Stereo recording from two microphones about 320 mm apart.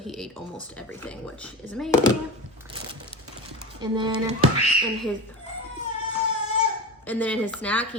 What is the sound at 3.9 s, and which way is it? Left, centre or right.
Speech, centre.